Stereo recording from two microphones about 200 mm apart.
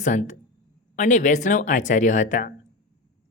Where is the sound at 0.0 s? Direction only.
40° left (ahead or behind).